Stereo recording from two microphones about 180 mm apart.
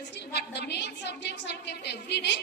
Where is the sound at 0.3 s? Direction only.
65° left (ahead or behind).